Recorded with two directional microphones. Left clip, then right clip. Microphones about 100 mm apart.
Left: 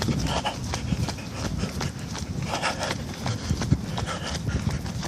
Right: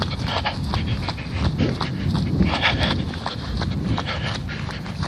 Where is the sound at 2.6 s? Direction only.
20° left (ahead or behind).